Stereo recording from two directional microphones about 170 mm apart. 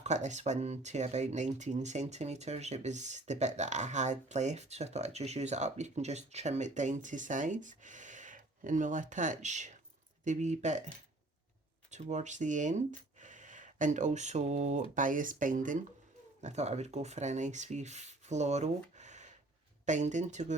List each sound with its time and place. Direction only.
0.0 s speech: 45° right (ahead or behind)
11.9 s speech: 45° right (ahead or behind)